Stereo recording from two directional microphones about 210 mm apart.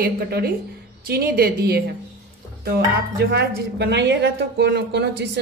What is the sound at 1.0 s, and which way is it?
Speech, 45° right (ahead or behind).